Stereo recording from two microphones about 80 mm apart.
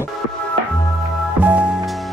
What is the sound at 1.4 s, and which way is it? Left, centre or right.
Music, centre.